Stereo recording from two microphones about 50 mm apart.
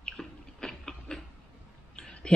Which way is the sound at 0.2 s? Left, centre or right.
Centre.